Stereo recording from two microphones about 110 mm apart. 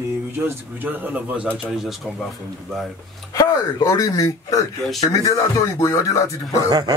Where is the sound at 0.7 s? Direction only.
15° right (ahead or behind).